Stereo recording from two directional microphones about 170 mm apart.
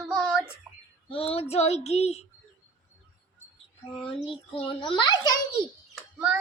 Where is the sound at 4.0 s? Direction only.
35° left (ahead or behind).